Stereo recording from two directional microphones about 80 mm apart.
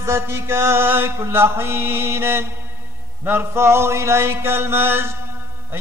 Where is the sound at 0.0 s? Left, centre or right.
Right.